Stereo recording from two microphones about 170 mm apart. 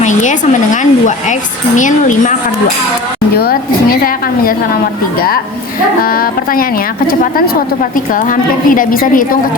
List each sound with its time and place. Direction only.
0.0 s speech: 45° left (ahead or behind)
3.3 s a woman's voice: 65° left (ahead or behind)
6.0 s a woman's voice: 60° left (ahead or behind)